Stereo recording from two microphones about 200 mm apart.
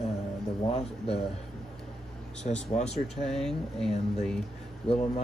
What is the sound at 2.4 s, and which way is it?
Speech, 35° left (ahead or behind).